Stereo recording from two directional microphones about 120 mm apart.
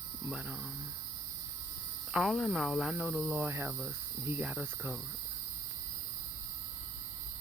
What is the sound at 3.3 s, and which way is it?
Cricket, 20° right (ahead or behind).